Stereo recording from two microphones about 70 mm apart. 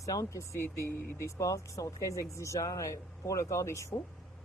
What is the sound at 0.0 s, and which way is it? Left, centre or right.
Speech, left.